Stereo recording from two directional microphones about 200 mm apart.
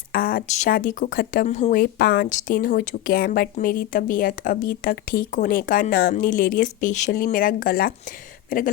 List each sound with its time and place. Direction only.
0.1 s speech: 45° left (ahead or behind)